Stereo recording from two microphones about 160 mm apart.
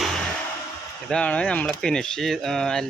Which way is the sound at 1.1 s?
10° left (ahead or behind).